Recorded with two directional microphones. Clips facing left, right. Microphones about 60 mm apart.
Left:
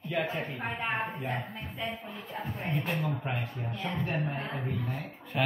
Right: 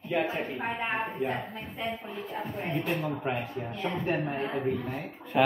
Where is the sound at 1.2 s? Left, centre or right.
Right.